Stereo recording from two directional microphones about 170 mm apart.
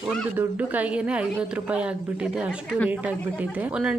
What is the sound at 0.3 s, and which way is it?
Speech, 10° right (ahead or behind).